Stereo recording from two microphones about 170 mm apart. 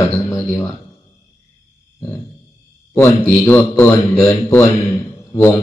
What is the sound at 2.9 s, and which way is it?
Speech, 15° left (ahead or behind).